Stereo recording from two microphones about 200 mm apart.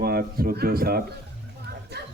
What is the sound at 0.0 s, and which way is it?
Speech, 50° right (ahead or behind).